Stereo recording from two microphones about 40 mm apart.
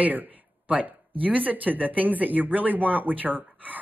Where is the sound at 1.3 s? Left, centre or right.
Right.